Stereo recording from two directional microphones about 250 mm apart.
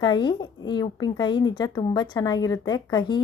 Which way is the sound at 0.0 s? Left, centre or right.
Centre.